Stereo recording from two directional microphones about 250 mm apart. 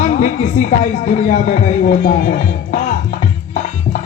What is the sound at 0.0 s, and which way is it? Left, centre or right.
Speech, left.